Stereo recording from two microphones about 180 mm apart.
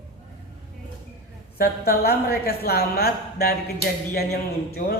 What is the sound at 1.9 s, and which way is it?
Speech, 60° left (ahead or behind).